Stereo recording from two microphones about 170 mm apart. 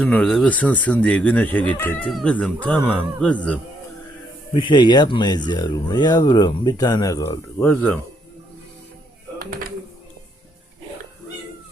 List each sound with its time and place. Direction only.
0.0 s speech: 5° left (ahead or behind)
4.5 s speech: 30° left (ahead or behind); by 7.9 s 10° left (ahead or behind)
9.4 s a sound: 60° right (ahead or behind)